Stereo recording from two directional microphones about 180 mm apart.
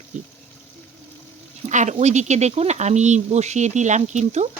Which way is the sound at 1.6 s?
40° right (ahead or behind).